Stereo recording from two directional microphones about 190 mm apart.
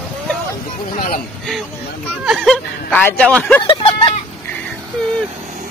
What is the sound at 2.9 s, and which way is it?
Speech, 10° left (ahead or behind).